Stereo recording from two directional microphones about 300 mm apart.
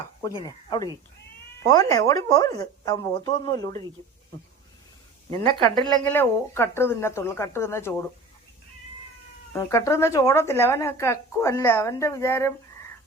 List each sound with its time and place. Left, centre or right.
1.6 s speech: centre
5.5 s speech: centre
6.1 s speech: centre
9.5 s speech: centre